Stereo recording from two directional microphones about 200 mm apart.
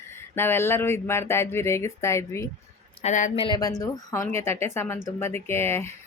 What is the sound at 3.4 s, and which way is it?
Speech, 20° left (ahead or behind).